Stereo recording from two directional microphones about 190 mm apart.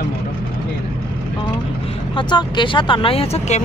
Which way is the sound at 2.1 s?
25° left (ahead or behind).